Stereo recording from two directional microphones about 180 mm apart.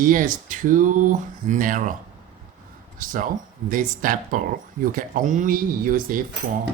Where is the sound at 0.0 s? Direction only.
50° right (ahead or behind).